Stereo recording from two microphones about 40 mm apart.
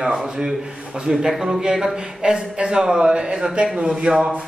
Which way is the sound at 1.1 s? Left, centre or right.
Centre.